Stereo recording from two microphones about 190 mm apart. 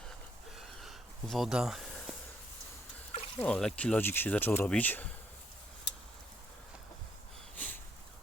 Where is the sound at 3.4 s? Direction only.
5° left (ahead or behind).